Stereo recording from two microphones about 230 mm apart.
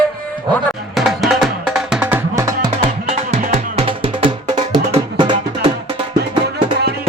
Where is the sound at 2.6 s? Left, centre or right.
Right.